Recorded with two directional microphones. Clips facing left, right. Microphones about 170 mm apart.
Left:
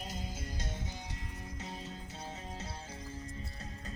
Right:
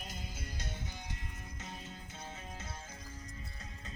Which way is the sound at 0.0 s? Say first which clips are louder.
Left 4 dB; 30° left (ahead or behind).